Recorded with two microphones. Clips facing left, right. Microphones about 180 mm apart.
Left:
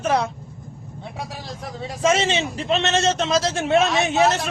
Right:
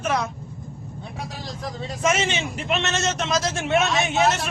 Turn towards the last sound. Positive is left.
turn(degrees=35)  # may be behind; listen again after turning